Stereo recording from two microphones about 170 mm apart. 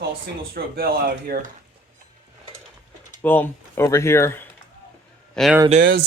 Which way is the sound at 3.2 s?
10° left (ahead or behind).